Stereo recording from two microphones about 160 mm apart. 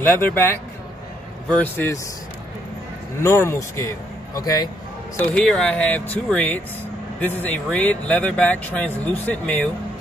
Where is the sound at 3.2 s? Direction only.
15° left (ahead or behind).